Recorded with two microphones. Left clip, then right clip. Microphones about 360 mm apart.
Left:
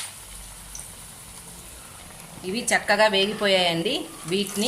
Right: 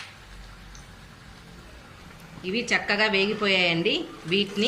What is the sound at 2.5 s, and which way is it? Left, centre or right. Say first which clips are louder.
Speech: left 2 dB; left.